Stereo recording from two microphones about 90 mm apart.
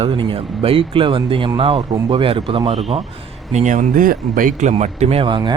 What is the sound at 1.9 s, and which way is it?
Speech, 45° right (ahead or behind).